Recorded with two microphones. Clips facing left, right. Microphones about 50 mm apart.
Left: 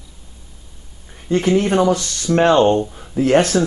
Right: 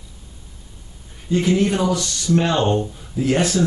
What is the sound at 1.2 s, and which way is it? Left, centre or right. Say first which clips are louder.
Speech: left 2 dB; left.